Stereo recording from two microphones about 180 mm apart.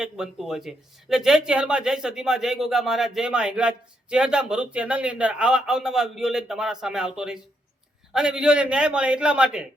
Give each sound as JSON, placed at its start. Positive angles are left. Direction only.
{"t": 0.0, "sound": "speech", "side_deg": -5}